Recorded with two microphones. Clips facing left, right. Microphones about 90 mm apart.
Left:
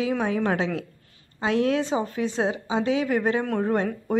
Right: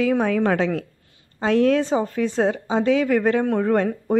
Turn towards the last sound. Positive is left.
turn(degrees=-50)  # may be behind; listen again after turning